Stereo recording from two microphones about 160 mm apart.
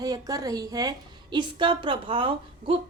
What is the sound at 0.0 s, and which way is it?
A woman's voice, 25° right (ahead or behind).